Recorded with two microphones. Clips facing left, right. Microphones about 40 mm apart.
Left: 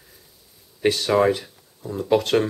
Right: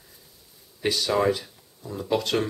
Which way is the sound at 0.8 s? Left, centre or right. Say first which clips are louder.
Left 4 dB; left.